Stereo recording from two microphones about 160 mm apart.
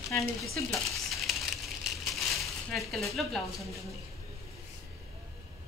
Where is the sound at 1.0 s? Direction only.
Centre (ahead or behind).